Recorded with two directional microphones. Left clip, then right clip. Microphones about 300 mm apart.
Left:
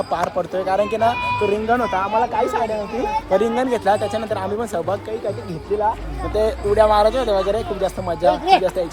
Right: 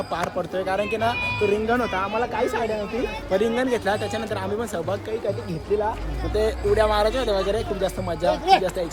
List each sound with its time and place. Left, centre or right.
0.1 s speech: centre
6.3 s speech: centre
8.3 s speech: left